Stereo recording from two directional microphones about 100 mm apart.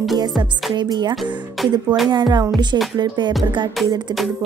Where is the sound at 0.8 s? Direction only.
50° right (ahead or behind).